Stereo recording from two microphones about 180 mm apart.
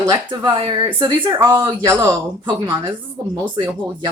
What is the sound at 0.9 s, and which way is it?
Speech, 15° right (ahead or behind).